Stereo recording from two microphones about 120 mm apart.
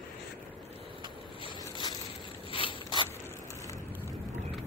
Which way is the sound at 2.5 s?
45° left (ahead or behind).